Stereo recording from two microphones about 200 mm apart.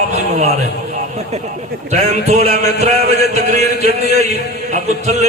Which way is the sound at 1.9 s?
35° right (ahead or behind).